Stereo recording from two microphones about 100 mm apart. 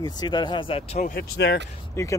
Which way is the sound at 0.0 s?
45° left (ahead or behind).